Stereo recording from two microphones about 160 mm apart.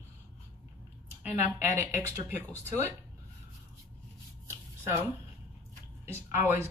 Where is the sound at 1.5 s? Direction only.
15° right (ahead or behind).